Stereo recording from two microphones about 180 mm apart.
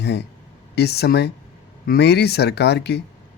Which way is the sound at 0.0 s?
70° left (ahead or behind).